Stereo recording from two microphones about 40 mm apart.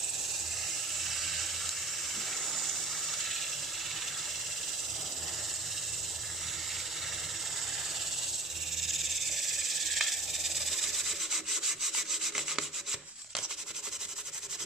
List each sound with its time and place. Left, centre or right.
1.0 s sink: centre
8.8 s insect: centre